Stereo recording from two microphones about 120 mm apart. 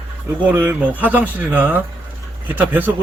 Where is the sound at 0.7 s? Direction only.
15° right (ahead or behind).